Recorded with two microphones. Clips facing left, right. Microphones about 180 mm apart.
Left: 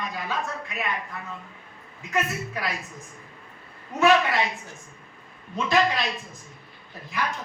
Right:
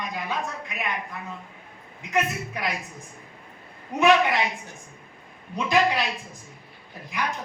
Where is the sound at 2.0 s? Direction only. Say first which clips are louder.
Right 2 dB; 15° right (ahead or behind).